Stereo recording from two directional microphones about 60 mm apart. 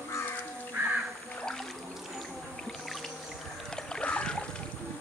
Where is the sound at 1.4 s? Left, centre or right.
Centre.